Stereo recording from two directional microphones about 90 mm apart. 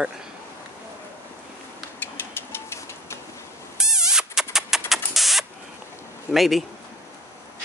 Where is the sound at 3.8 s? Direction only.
5° right (ahead or behind).